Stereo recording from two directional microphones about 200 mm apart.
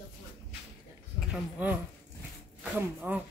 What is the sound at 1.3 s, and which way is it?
Speech, 5° right (ahead or behind).